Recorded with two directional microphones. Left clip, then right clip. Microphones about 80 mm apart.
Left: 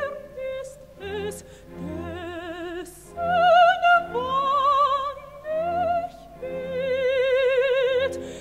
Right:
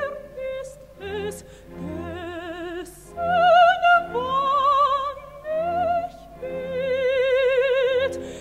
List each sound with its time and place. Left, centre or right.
0.0 s music: left